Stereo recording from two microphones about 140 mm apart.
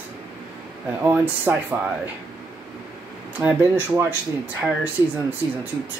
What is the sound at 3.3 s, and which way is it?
Speech, 15° right (ahead or behind).